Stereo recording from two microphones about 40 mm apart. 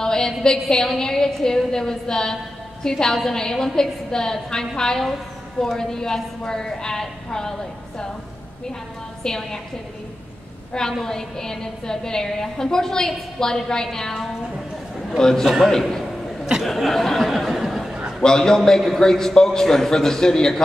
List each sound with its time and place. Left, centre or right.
0.0 s a sound: centre
0.4 s a woman's voice: centre
9.2 s a woman's voice: centre
10.7 s a woman's voice: centre
18.2 s a woman's voice: centre